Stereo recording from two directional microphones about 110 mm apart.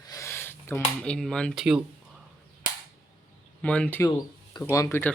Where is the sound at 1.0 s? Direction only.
5° left (ahead or behind).